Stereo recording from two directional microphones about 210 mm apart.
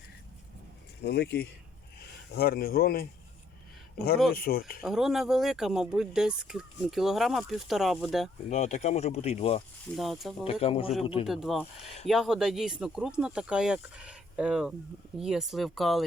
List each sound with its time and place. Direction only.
1.0 s speech: 50° left (ahead or behind)
4.8 s speech: centre (ahead or behind)
8.4 s speech: 35° left (ahead or behind)
9.9 s speech: centre (ahead or behind)
10.4 s speech: 25° left (ahead or behind)
11.3 s speech: centre (ahead or behind)